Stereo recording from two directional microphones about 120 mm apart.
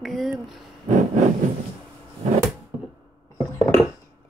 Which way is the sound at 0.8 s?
90° right.